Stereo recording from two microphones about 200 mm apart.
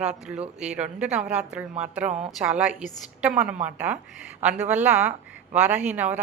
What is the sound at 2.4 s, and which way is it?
A woman's voice, 5° right (ahead or behind).